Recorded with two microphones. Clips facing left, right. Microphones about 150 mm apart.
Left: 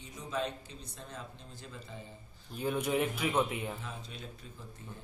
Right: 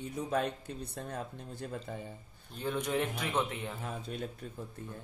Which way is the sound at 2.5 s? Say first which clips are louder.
Left 1 dB; 10° left (ahead or behind).